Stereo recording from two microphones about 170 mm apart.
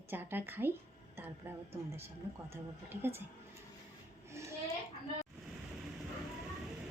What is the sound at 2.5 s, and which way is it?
Speech, 15° right (ahead or behind).